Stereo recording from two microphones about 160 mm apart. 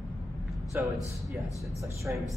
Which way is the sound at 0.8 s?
10° right (ahead or behind).